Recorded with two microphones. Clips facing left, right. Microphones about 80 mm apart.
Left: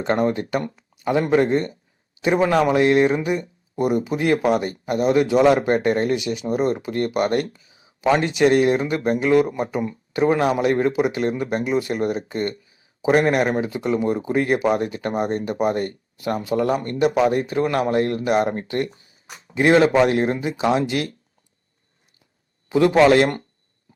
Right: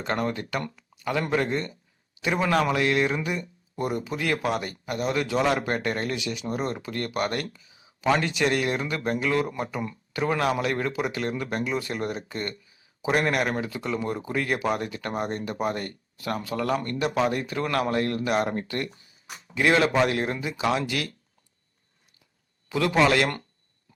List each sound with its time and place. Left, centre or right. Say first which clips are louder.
0.0 s speech: left 7 dB; left
22.7 s speech: left 7 dB; left